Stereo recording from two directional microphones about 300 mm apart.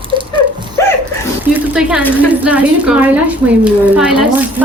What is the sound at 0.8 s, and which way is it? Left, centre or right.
Dog, centre.